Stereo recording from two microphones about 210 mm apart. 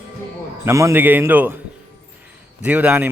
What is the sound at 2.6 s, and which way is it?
Speech, 5° right (ahead or behind).